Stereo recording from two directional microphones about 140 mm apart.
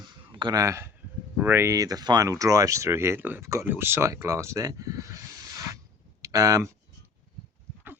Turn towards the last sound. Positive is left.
turn(degrees=-25)  # may be behind; listen again after turning